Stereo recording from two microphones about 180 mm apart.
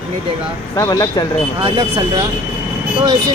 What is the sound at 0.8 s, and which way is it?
Speech, 20° left (ahead or behind).